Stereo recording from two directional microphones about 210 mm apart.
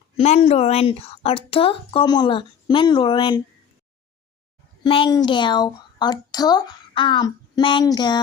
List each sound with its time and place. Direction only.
0.2 s a woman's voice: 30° left (ahead or behind)
4.8 s a woman's voice: 25° left (ahead or behind)